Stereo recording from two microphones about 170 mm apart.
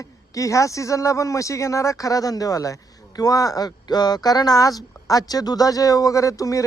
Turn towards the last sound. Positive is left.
turn(degrees=20)  # may be behind; listen again after turning